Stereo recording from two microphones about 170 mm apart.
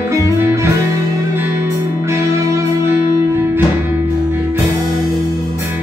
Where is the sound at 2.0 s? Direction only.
15° right (ahead or behind).